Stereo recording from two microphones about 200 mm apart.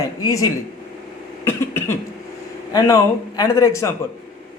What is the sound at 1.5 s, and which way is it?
Cough, 10° left (ahead or behind).